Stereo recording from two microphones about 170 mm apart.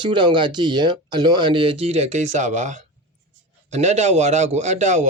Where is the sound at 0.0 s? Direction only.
30° right (ahead or behind).